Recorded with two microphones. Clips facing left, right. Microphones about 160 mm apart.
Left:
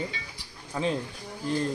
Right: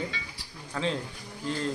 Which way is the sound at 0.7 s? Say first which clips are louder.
Left 2 dB; 15° left (ahead or behind).